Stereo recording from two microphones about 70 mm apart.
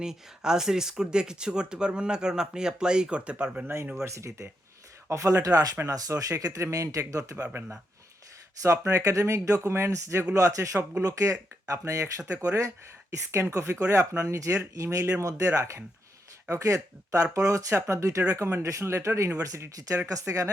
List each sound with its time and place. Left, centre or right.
0.0 s speech: centre
4.0 s speech: right
8.6 s speech: right